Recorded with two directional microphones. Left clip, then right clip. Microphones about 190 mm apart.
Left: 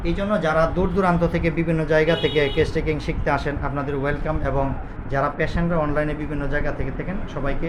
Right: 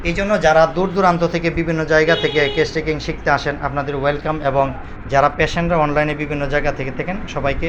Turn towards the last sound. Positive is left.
turn(degrees=-25)  # may be behind; listen again after turning